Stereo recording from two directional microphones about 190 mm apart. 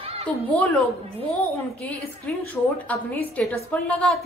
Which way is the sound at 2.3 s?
5° left (ahead or behind).